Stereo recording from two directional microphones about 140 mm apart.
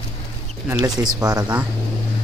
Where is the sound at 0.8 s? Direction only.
30° right (ahead or behind).